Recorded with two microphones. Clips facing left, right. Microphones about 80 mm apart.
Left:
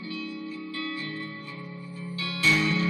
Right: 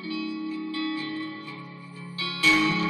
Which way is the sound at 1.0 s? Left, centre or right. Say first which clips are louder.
Right 3 dB; left.